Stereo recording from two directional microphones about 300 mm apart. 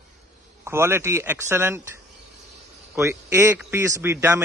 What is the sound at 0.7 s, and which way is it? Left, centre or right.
A man's voice, centre.